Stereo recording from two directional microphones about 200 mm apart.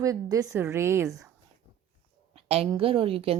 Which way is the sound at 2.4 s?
30° right (ahead or behind).